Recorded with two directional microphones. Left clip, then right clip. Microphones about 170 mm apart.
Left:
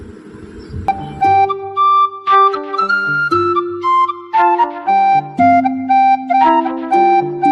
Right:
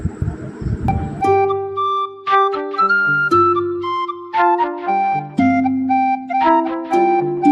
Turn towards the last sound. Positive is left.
turn(degrees=0)  # may be behind; listen again after turning